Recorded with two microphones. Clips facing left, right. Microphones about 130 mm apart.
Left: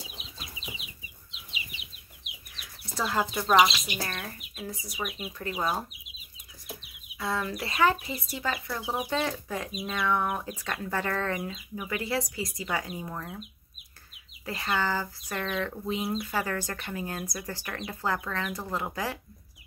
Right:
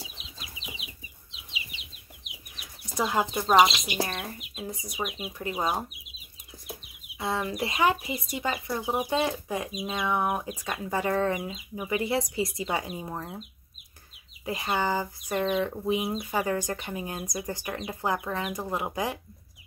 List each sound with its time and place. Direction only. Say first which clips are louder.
2.5 s chicken: right 4 dB; 15° right (ahead or behind)
3.4 s speech: right 2 dB; 20° right (ahead or behind)
7.2 s speech: right 2 dB; 20° right (ahead or behind)
14.4 s speech: right 2 dB; 20° right (ahead or behind)